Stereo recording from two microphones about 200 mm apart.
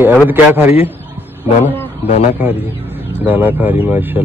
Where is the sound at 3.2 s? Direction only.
10° right (ahead or behind).